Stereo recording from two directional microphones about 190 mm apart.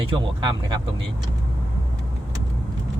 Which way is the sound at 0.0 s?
25° right (ahead or behind).